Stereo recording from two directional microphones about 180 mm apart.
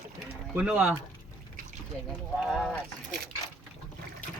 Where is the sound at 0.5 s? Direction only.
5° right (ahead or behind).